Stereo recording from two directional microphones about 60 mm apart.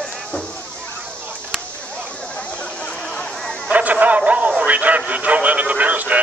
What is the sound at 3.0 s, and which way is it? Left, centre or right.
Chatter, centre.